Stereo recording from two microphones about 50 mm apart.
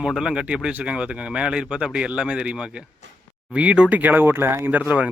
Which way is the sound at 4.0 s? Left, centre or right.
Right.